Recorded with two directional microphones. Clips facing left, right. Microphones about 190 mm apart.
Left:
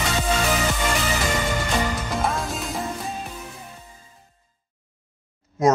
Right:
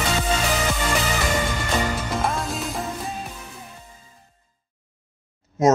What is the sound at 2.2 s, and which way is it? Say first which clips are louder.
Music: even; centre (ahead or behind).